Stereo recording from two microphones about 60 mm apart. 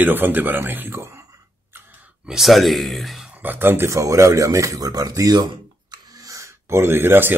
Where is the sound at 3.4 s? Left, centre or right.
Right.